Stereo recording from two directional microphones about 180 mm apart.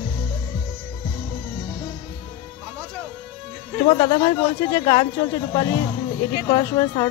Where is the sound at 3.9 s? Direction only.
30° left (ahead or behind).